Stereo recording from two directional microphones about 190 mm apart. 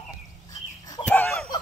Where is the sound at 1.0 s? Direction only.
10° left (ahead or behind).